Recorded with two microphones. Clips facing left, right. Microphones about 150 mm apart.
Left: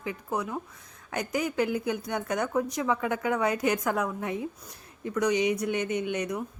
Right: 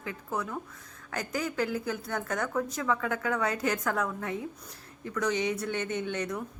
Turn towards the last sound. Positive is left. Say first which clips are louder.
# left 3 dB
turn(degrees=15)  # may be behind; listen again after turning